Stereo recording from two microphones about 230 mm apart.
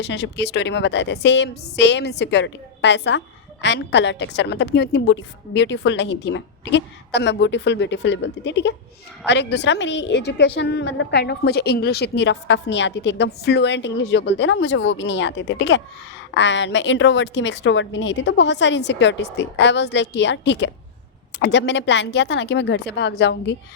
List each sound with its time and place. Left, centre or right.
0.0 s a woman's voice: left